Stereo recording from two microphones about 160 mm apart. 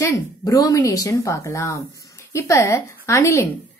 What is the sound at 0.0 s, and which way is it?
A woman's voice, 20° left (ahead or behind).